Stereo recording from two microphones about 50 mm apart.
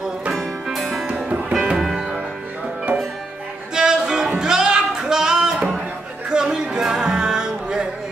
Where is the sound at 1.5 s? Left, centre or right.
Centre.